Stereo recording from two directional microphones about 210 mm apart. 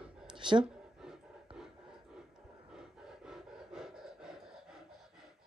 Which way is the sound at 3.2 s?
Centre (ahead or behind).